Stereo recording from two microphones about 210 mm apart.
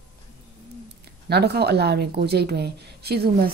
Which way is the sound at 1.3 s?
50° right (ahead or behind).